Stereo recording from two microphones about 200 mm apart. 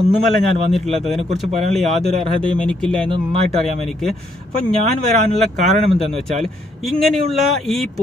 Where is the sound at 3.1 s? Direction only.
30° right (ahead or behind).